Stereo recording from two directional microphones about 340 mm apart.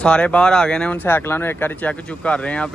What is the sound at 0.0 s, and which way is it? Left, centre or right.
Speech, centre.